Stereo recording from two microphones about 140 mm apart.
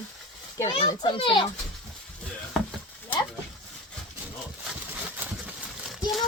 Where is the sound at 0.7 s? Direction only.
40° left (ahead or behind).